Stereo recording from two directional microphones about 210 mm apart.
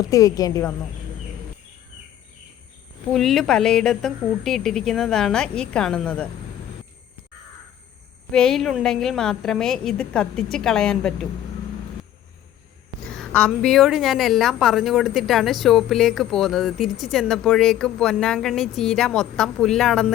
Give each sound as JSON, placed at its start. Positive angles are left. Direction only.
{"t": 0.0, "sound": "speech", "side_deg": 15}
{"t": 3.1, "sound": "a woman's voice", "side_deg": 0}
{"t": 8.3, "sound": "a woman's voice", "side_deg": 5}
{"t": 13.1, "sound": "a woman's voice", "side_deg": 5}